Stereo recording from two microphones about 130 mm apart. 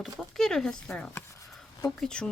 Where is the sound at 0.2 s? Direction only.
5° left (ahead or behind).